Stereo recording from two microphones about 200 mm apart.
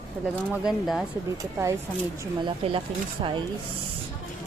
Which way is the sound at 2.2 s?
25° right (ahead or behind).